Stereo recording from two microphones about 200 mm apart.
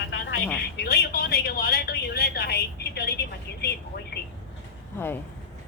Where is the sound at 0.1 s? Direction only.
60° left (ahead or behind).